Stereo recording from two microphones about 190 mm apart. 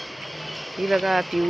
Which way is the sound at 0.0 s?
Centre (ahead or behind).